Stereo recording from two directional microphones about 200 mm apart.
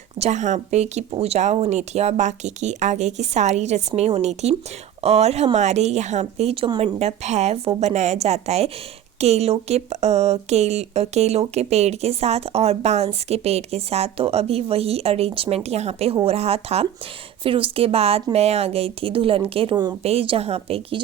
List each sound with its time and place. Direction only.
0.2 s a woman's voice: 35° right (ahead or behind)